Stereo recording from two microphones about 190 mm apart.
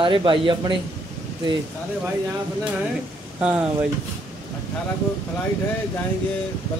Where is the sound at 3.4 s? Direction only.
5° right (ahead or behind).